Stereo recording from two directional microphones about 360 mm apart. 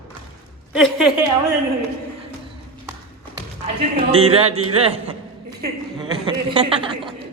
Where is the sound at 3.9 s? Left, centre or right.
Centre.